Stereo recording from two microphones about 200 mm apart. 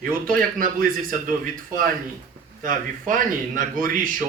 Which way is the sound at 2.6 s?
40° right (ahead or behind).